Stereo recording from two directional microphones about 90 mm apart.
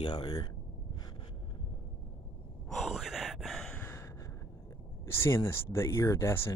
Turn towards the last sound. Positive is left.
turn(degrees=30)  # may be behind; listen again after turning